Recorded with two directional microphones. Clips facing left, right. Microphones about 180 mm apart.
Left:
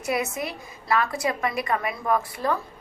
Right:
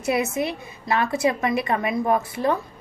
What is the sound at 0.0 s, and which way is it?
A woman's voice, 25° right (ahead or behind).